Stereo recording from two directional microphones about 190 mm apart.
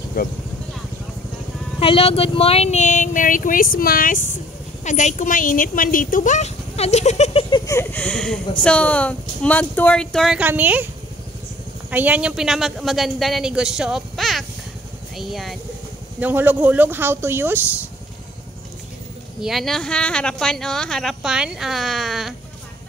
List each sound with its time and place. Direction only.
0.2 s speech: 50° left (ahead or behind)
1.8 s speech: 30° left (ahead or behind)
7.5 s speech: 15° left (ahead or behind); by 10.9 s 10° right (ahead or behind)
11.9 s speech: 10° right (ahead or behind)
19.4 s speech: centre (ahead or behind)